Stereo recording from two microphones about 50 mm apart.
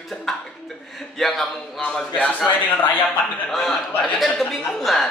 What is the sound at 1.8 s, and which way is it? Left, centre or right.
Speech, left.